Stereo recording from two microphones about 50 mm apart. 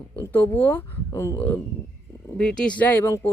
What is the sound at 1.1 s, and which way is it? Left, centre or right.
Speech, left.